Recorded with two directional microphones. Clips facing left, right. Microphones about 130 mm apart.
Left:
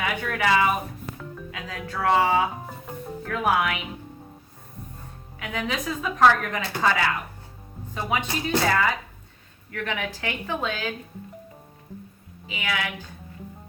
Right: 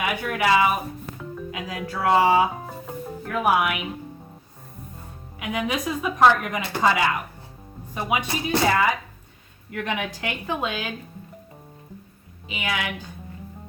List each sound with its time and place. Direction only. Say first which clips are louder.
0.0 s a woman's voice: right 2 dB; 10° right (ahead or behind)
5.4 s a woman's voice: right 3 dB; 15° right (ahead or behind)
12.5 s a woman's voice: right 1 dB; 20° right (ahead or behind)